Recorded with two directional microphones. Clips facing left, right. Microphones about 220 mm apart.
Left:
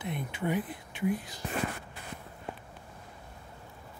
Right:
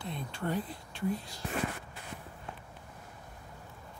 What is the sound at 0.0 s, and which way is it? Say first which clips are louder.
Speech: left 3 dB; 20° left (ahead or behind).